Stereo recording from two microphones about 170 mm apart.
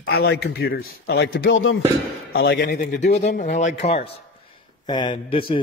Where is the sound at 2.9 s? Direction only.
45° left (ahead or behind).